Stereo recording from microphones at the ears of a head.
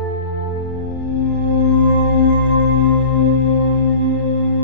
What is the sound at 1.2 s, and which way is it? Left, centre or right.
Music, left.